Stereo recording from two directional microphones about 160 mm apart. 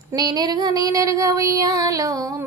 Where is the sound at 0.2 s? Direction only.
25° right (ahead or behind).